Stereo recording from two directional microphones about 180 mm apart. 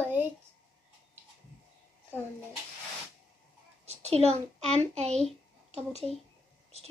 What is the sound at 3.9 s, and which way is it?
A child's voice, 35° right (ahead or behind).